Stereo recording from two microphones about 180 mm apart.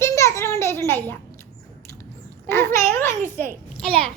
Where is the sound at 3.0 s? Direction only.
45° right (ahead or behind).